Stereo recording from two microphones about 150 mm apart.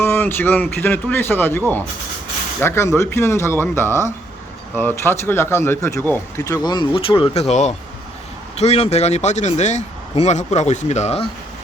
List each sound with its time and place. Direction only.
0.0 s speech: 15° left (ahead or behind); by 11.3 s 45° left (ahead or behind)